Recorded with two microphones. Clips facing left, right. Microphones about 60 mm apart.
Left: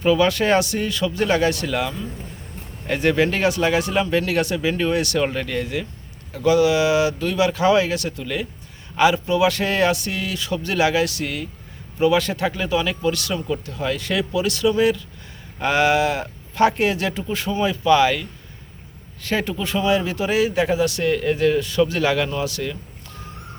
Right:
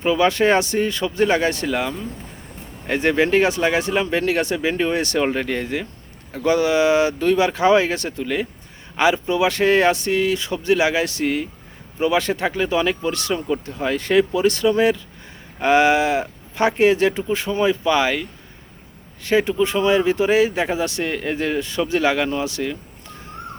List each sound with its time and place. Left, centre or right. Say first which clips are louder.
0.0 s speech: right 1 dB; right